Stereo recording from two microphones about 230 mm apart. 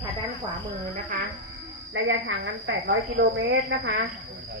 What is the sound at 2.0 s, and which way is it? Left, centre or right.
A woman's voice, right.